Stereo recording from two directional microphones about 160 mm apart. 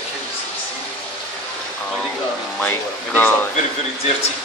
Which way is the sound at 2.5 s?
10° left (ahead or behind).